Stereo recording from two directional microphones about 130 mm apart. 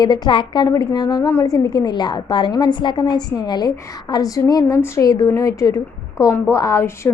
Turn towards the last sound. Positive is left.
turn(degrees=20)  # may be behind; listen again after turning